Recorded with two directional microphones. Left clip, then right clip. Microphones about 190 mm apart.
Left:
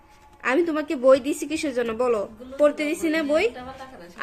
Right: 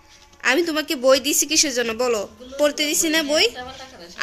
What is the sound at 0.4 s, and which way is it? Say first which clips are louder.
Speech: right 3 dB; centre (ahead or behind).